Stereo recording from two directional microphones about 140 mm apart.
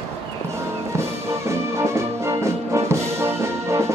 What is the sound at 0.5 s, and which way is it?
Music, 20° right (ahead or behind).